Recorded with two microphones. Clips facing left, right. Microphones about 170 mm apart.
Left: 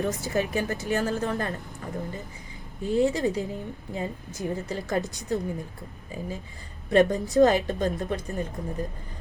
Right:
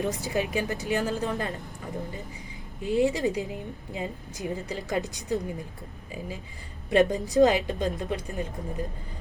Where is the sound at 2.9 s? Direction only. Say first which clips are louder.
Left 1 dB; 15° right (ahead or behind).